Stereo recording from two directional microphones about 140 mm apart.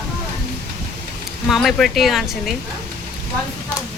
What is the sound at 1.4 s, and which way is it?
Speech, centre (ahead or behind).